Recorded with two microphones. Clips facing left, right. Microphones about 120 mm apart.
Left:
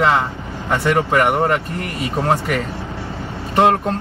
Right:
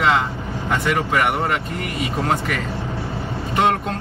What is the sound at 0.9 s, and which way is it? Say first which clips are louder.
Speech: left 5 dB; 40° left (ahead or behind).